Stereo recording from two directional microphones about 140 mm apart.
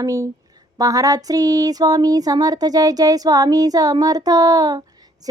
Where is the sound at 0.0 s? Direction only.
25° right (ahead or behind).